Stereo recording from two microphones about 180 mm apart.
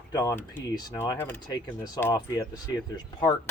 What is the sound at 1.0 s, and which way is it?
Speech, 10° left (ahead or behind).